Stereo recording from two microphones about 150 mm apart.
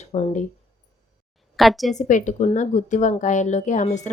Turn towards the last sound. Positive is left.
turn(degrees=55)  # may be behind; listen again after turning